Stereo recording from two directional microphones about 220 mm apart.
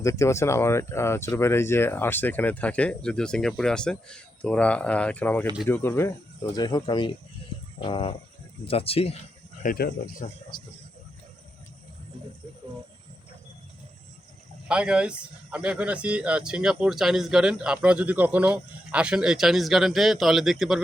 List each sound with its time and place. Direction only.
0.0 s speech: 15° left (ahead or behind)
9.6 s speech: 40° left (ahead or behind)
14.7 s speech: 5° right (ahead or behind)